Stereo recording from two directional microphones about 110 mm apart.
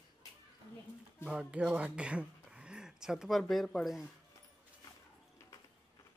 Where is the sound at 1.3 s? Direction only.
10° right (ahead or behind).